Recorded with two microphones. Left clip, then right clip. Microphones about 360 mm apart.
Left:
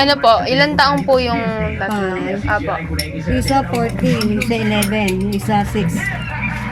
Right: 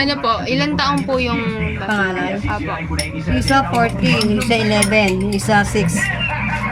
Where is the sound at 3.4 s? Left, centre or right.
Right.